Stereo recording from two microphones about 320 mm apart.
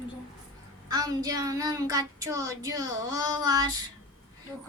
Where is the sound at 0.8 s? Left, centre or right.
Centre.